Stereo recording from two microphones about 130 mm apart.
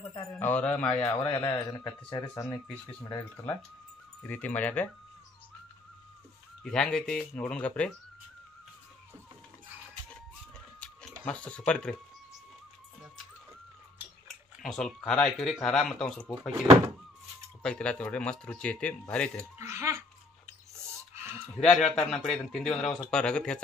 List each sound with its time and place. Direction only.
0.4 s speech: 10° left (ahead or behind)
1.3 s speech: 30° left (ahead or behind)
4.2 s speech: 10° left (ahead or behind)
6.6 s speech: 5° left (ahead or behind)
10.8 s a sound: 5° left (ahead or behind)
11.2 s speech: 10° left (ahead or behind)
14.2 s speech: 5° left (ahead or behind)
17.6 s speech: 10° left (ahead or behind)
19.7 s a sound: 20° right (ahead or behind)
21.1 s a sound: 20° right (ahead or behind)
21.5 s a man's voice: centre (ahead or behind)